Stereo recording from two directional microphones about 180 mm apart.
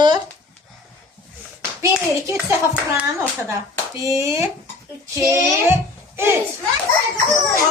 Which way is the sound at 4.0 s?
15° right (ahead or behind).